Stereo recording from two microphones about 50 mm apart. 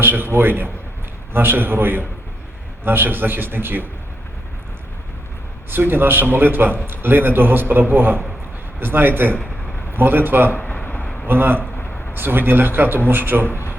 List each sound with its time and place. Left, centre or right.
0.0 s a man's voice: right
5.7 s a man's voice: right
10.5 s speech: left
10.8 s a sound: left
11.3 s a man's voice: right